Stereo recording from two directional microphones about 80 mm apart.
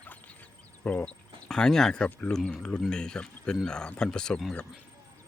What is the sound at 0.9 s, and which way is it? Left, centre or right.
Speech, centre.